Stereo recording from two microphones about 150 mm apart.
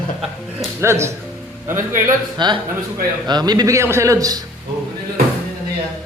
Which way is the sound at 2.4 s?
30° right (ahead or behind).